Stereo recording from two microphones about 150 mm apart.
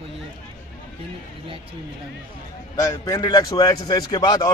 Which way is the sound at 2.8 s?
20° left (ahead or behind).